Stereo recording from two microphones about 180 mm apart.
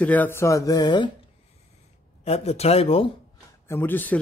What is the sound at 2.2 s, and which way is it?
Speech, 35° left (ahead or behind).